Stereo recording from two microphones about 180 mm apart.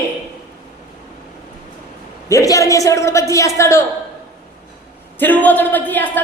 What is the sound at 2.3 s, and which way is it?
A woman's voice, 15° left (ahead or behind).